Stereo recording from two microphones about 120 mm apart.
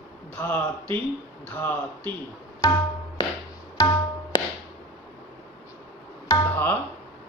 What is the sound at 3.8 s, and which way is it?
Tabla, 25° left (ahead or behind).